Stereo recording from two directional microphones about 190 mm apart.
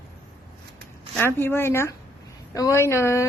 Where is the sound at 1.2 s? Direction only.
10° left (ahead or behind).